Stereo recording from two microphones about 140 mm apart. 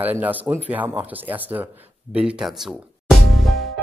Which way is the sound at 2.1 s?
5° right (ahead or behind).